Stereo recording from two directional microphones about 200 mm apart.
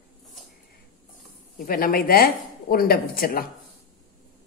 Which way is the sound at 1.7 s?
45° left (ahead or behind).